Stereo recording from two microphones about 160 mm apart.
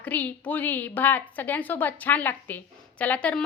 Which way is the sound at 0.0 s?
10° left (ahead or behind).